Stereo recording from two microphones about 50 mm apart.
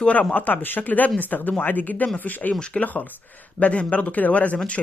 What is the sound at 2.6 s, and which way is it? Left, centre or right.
Speech, left.